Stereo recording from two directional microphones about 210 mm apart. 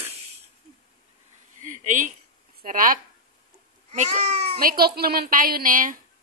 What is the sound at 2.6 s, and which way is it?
Speech, 40° right (ahead or behind).